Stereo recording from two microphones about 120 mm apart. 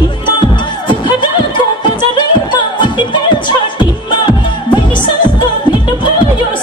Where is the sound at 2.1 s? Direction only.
40° left (ahead or behind).